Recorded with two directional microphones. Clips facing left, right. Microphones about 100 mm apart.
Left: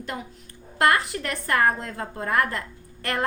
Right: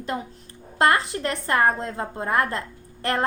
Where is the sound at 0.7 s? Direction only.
25° right (ahead or behind).